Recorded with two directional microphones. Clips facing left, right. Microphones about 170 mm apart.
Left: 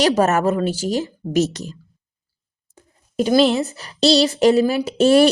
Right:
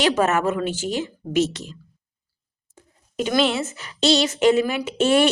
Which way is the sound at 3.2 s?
35° left (ahead or behind).